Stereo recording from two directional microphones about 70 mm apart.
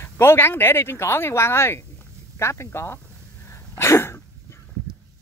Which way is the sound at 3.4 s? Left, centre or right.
Left.